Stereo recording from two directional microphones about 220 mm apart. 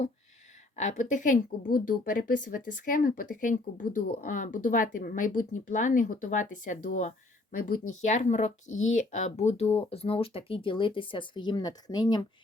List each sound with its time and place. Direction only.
0.8 s a woman's voice: 35° left (ahead or behind); by 12.2 s 20° left (ahead or behind)